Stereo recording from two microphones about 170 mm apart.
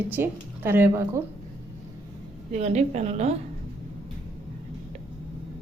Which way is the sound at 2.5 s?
40° right (ahead or behind).